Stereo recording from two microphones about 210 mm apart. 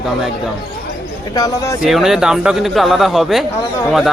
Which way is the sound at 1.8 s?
Centre (ahead or behind).